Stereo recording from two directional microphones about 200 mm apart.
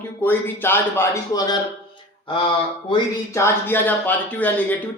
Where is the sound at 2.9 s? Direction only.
15° left (ahead or behind).